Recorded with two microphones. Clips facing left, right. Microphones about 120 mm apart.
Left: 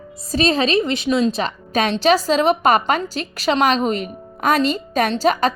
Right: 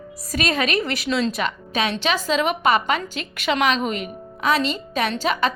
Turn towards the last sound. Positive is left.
turn(degrees=40)  # may be behind; listen again after turning